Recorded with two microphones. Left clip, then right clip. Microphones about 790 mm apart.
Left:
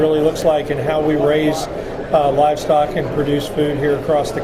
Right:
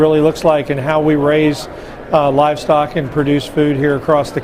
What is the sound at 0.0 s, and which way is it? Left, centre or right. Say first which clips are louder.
Speech: right 3 dB; right.